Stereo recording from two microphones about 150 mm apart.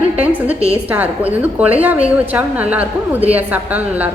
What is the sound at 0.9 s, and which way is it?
A woman's voice, 10° right (ahead or behind).